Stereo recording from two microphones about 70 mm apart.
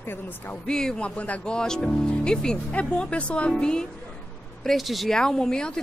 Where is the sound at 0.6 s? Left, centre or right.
Centre.